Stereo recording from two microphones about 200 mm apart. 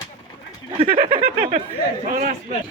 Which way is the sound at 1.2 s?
40° right (ahead or behind).